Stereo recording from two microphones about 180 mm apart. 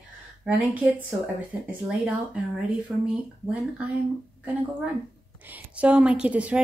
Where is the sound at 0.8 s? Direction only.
10° right (ahead or behind).